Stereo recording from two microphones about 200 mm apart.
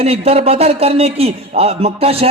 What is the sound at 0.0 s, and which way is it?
A man's voice, 30° right (ahead or behind).